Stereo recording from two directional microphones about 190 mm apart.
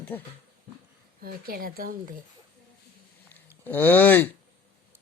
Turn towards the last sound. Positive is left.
turn(degrees=10)  # may be behind; listen again after turning